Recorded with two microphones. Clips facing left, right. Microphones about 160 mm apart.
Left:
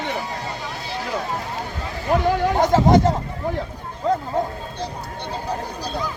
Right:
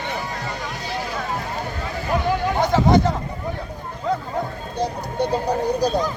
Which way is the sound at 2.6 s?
40° left (ahead or behind).